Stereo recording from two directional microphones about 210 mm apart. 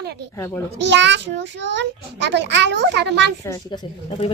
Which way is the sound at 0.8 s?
55° right (ahead or behind).